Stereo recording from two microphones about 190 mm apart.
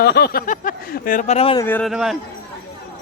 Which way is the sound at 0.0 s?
60° left (ahead or behind).